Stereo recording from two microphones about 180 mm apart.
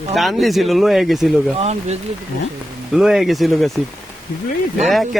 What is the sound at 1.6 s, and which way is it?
Speech, 40° right (ahead or behind).